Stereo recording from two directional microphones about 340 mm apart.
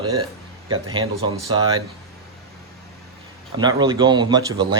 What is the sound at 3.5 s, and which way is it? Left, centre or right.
Speech, centre.